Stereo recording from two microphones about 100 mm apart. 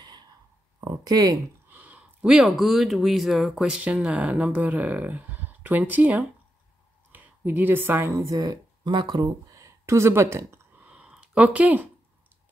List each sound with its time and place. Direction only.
0.7 s speech: 40° right (ahead or behind)
1.7 s a woman's voice: 15° right (ahead or behind)
10.8 s a sound: 10° right (ahead or behind)